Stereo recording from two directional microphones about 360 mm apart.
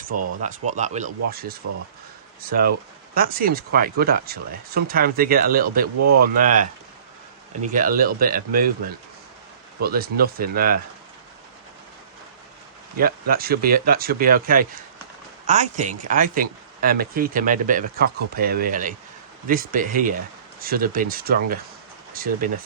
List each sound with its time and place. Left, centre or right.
0.4 s speech: centre
7.7 s speech: right
13.0 s speech: right